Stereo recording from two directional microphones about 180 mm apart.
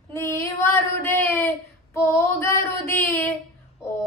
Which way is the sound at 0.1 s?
15° left (ahead or behind).